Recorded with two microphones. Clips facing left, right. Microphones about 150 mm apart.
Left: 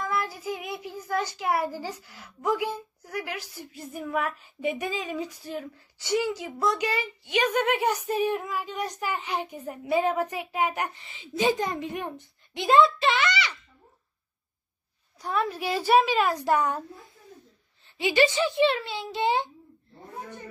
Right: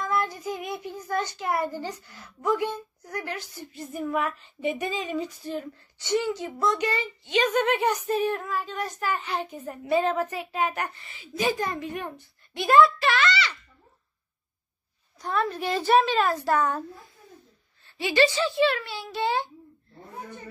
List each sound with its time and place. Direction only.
0.0 s a child's voice: 5° left (ahead or behind)
15.1 s a child's voice: 10° left (ahead or behind)
17.8 s a child's voice: 15° left (ahead or behind)